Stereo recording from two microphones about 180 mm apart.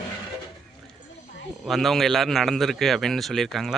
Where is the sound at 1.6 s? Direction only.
Centre (ahead or behind).